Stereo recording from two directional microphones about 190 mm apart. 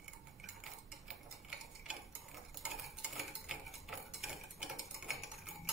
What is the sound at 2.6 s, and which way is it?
Cutlery, centre (ahead or behind).